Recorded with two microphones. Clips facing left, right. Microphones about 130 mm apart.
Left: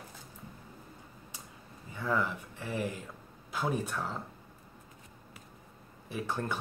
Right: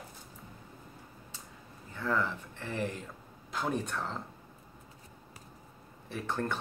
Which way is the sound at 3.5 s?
5° left (ahead or behind).